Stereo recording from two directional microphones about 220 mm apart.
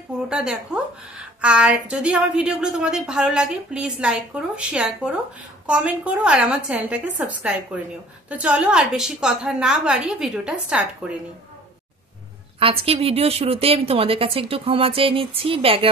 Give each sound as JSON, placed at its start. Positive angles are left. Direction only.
{"t": 0.3, "sound": "a woman's voice", "side_deg": -5}
{"t": 12.5, "sound": "a woman's voice", "side_deg": -25}